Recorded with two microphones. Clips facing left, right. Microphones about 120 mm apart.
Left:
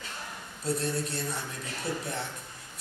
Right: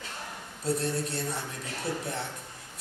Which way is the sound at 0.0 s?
40° right (ahead or behind).